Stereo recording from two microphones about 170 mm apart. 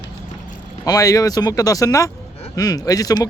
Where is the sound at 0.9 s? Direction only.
20° left (ahead or behind).